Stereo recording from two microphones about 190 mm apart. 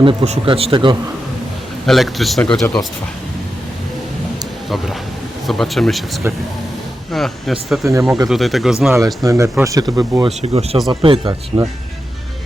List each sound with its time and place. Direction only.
0.0 s speech: 30° right (ahead or behind)
1.9 s speech: centre (ahead or behind)
5.5 s speech: centre (ahead or behind)
7.9 s speech: 15° right (ahead or behind)
8.3 s speech: centre (ahead or behind)
9.2 s speech: 15° right (ahead or behind)
10.4 s speech: 30° right (ahead or behind)